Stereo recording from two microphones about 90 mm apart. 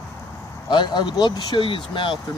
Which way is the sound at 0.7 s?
60° left (ahead or behind).